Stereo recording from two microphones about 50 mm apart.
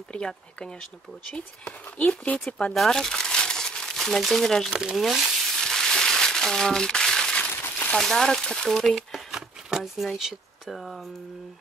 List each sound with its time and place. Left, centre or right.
0.1 s speech: centre
2.0 s speech: left
2.7 s crumpling: centre
4.6 s speech: centre
5.0 s frying: centre
5.6 s crumpling: centre
7.9 s speech: centre